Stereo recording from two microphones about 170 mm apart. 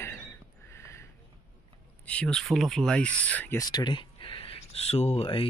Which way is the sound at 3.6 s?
25° left (ahead or behind).